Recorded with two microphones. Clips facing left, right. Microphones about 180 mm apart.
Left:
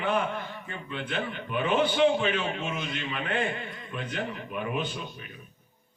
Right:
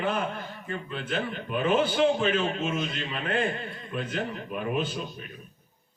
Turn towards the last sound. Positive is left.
turn(degrees=-40)  # may be behind; listen again after turning